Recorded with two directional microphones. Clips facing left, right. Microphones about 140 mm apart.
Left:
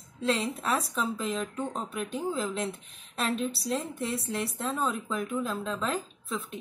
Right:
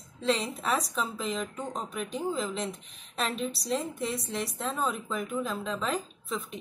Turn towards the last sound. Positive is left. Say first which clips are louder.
# even
turn(degrees=0)  # may be behind; listen again after turning